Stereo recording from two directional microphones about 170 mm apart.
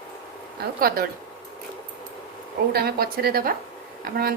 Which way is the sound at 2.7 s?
65° right (ahead or behind).